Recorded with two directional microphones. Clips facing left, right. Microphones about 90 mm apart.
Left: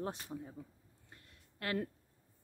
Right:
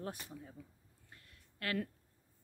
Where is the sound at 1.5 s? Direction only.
30° left (ahead or behind).